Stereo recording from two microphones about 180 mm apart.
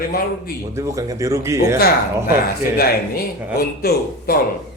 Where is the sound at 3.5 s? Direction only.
55° left (ahead or behind).